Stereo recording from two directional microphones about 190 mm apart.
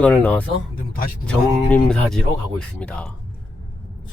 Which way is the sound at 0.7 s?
45° left (ahead or behind).